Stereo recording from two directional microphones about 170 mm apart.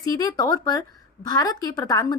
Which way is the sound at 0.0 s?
20° left (ahead or behind).